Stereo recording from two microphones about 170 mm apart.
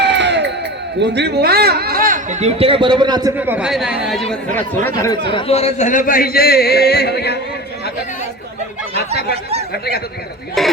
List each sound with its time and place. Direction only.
0.0 s crowd: 90° right
0.9 s speech: 90° right; by 3.3 s 25° right (ahead or behind)
3.3 s a man's voice: 10° right (ahead or behind); by 5.3 s 20° left (ahead or behind)
5.3 s speech: 35° left (ahead or behind); by 7.3 s 75° left (ahead or behind)
9.3 s speech: 35° right (ahead or behind)
9.7 s speech: 70° left (ahead or behind)
10.6 s a man's voice: centre (ahead or behind)